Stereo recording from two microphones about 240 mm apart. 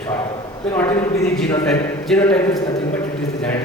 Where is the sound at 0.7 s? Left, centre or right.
Centre.